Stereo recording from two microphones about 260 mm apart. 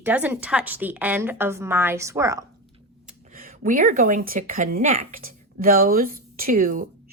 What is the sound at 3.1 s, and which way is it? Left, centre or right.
Speech, right.